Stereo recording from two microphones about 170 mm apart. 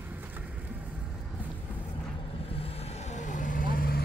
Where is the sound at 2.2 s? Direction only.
35° left (ahead or behind); by 4.0 s 60° left (ahead or behind).